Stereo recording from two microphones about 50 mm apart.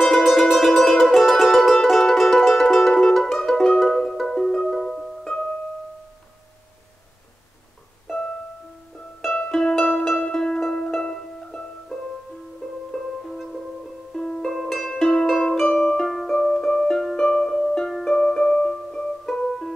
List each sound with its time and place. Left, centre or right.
0.0 s music: centre
5.2 s music: centre
8.1 s music: centre
9.5 s music: centre
14.1 s music: centre
14.5 s music: centre
14.9 s music: centre
15.7 s music: centre
16.1 s music: centre